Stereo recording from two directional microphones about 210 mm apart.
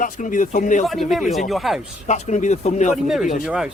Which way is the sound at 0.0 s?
40° left (ahead or behind).